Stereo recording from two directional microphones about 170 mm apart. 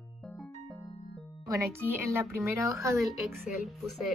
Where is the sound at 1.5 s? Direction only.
20° right (ahead or behind).